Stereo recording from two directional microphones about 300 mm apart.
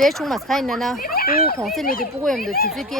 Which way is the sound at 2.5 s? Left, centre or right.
Left.